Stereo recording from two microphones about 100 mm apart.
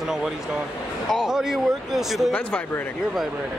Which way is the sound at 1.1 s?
5° right (ahead or behind).